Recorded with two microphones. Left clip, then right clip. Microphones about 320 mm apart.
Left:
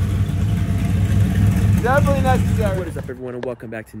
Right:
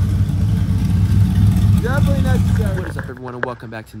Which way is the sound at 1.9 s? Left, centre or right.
Left.